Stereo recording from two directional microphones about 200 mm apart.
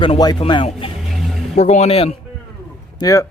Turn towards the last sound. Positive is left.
turn(degrees=15)  # may be behind; listen again after turning